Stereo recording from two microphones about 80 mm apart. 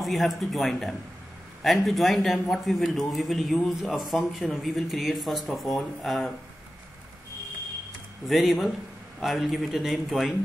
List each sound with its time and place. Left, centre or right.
0.0 s speech: centre
8.3 s speech: centre